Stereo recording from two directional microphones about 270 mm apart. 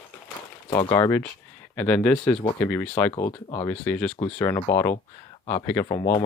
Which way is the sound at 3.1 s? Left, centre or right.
Centre.